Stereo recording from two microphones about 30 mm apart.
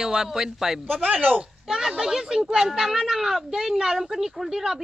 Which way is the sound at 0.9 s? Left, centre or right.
Right.